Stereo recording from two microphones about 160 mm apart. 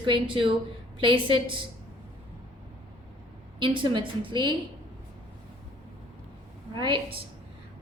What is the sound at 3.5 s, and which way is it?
A woman's voice, 30° right (ahead or behind).